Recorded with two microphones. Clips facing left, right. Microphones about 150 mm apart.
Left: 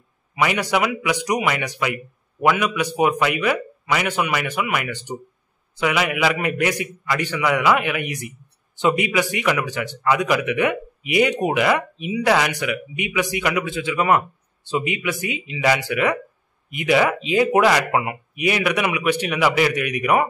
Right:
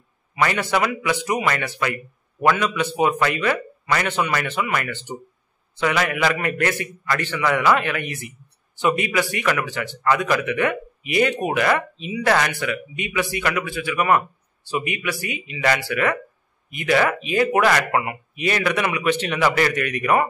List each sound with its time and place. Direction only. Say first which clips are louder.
0.4 s a man's voice: left 1 dB; 10° left (ahead or behind)